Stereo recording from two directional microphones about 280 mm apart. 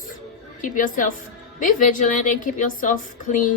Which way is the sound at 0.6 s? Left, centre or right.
Left.